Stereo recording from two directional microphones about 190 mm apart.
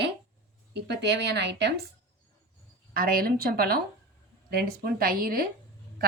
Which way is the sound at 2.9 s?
50° right (ahead or behind).